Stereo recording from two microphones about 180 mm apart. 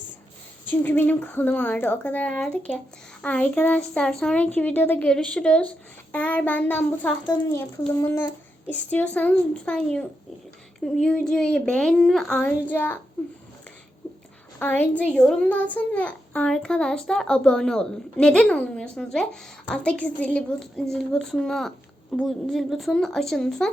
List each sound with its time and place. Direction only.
0.7 s a woman's voice: 10° left (ahead or behind)
14.6 s a child's voice: 10° left (ahead or behind)